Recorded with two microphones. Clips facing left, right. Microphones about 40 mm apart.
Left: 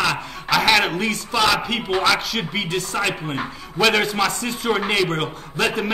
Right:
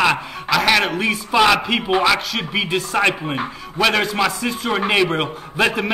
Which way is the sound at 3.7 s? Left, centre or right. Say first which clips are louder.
Even; centre.